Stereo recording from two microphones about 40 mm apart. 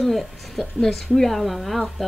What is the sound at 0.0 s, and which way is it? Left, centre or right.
A woman's voice, centre.